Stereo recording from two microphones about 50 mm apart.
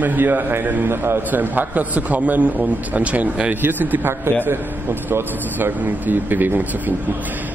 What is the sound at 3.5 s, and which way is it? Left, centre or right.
A man's voice, right.